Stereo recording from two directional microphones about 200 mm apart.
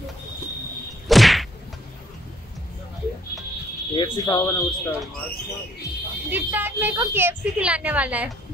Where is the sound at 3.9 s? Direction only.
20° left (ahead or behind).